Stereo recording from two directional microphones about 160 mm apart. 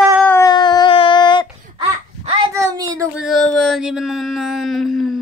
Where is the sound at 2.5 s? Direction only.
20° right (ahead or behind).